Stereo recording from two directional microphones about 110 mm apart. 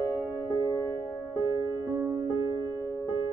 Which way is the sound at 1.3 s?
25° right (ahead or behind).